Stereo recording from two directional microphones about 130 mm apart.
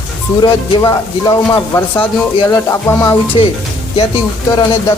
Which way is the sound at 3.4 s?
40° left (ahead or behind).